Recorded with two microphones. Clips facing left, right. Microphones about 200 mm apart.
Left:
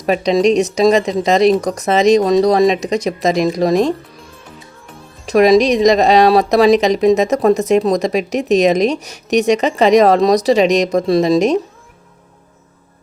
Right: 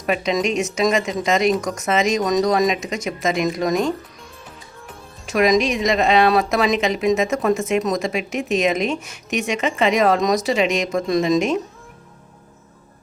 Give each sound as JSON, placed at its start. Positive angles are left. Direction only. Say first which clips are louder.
{"t": 0.0, "sound": "speech", "louder": "left 7 dB", "side_deg": 35}
{"t": 5.2, "sound": "speech", "louder": "left 7 dB", "side_deg": 35}